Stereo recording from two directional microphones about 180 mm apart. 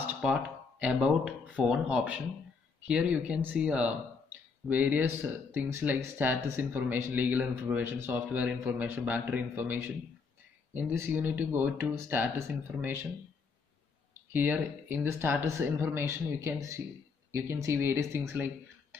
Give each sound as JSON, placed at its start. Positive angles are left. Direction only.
{"t": 0.0, "sound": "speech", "side_deg": -5}
{"t": 14.3, "sound": "speech", "side_deg": -10}